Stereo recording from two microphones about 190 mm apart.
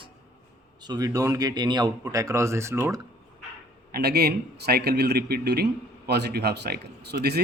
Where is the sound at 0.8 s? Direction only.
20° right (ahead or behind).